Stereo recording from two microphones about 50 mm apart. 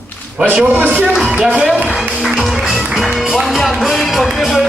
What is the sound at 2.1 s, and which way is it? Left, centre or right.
Music, centre.